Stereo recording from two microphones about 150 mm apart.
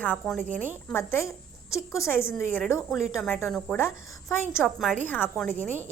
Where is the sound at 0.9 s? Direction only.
15° left (ahead or behind).